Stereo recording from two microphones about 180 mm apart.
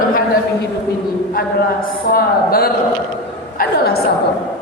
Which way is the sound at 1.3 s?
55° left (ahead or behind).